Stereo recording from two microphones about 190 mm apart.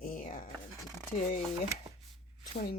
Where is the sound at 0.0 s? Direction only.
45° left (ahead or behind).